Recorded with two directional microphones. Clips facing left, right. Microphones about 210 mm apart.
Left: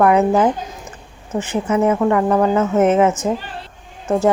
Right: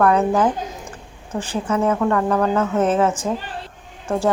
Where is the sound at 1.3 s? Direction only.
25° left (ahead or behind).